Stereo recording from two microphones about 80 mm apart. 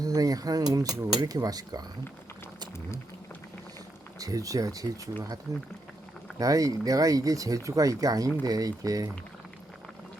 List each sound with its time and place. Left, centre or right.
0.0 s speech: right
4.2 s speech: right
6.4 s speech: right